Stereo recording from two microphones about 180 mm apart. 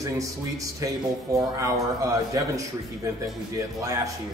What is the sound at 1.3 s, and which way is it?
A man's voice, 20° right (ahead or behind).